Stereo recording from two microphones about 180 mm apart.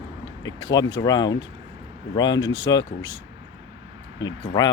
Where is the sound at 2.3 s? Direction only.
90° left.